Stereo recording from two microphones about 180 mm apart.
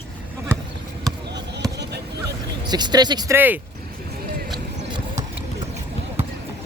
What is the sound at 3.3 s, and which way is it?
Speech, 10° right (ahead or behind).